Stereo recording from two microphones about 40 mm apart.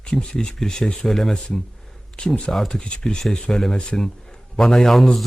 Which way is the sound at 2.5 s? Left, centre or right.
Centre.